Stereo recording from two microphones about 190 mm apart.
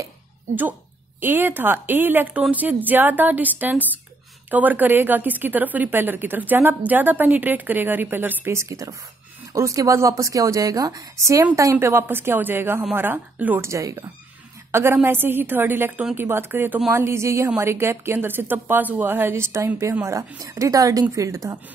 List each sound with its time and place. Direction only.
1.2 s a woman's voice: 10° right (ahead or behind)